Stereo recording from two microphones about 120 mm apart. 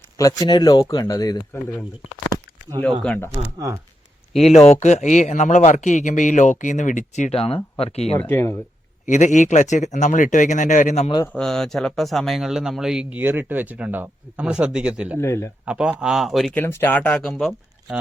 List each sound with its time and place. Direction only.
0.2 s speech: 30° left (ahead or behind)
4.5 s speech: 65° left (ahead or behind); by 7.3 s 90° left
7.3 s speech: 55° left (ahead or behind)
8.2 s speech: 20° left (ahead or behind)
9.0 s speech: 90° left
11.3 s speech: 5° left (ahead or behind); by 15.2 s 10° right (ahead or behind)
15.2 s a man's voice: 20° left (ahead or behind)
15.6 s a man's voice: 10° right (ahead or behind)
16.6 s speech: 15° left (ahead or behind)
17.3 s speech: centre (ahead or behind)